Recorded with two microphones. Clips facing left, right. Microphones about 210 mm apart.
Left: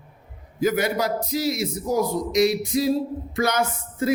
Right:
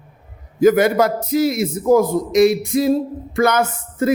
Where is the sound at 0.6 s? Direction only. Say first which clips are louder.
Right 9 dB; 50° right (ahead or behind).